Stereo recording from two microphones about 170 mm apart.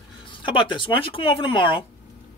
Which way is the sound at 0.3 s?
30° left (ahead or behind).